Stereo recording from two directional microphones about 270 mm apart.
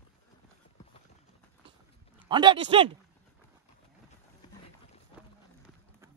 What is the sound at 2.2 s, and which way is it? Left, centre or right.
Speech, centre.